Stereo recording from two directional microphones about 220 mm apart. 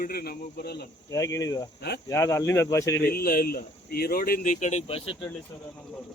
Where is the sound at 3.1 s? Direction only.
45° left (ahead or behind).